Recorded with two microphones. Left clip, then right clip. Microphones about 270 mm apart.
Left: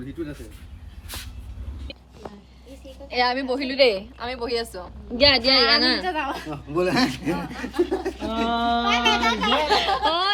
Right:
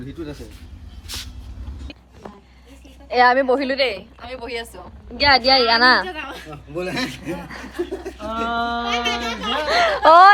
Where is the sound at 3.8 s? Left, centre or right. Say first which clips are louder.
Left 3 dB; centre.